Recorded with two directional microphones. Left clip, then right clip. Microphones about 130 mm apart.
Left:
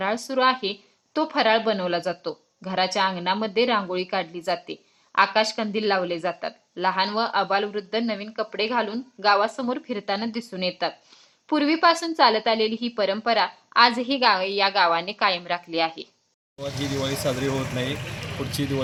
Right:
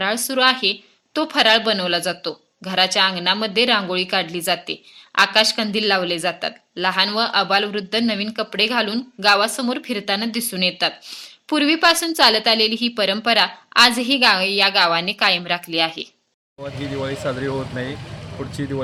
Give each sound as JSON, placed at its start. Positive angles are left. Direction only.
{"t": 0.0, "sound": "a woman's voice", "side_deg": -20}
{"t": 16.9, "sound": "speech", "side_deg": -5}